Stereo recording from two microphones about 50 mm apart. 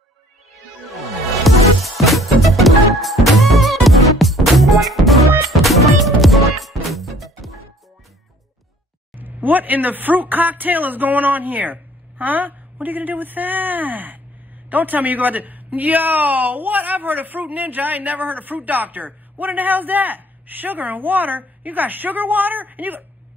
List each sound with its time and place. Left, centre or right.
0.8 s music: centre
9.1 s speech: right